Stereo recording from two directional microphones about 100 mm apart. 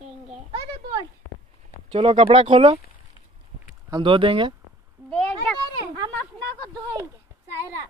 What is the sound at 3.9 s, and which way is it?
Speech, 55° right (ahead or behind).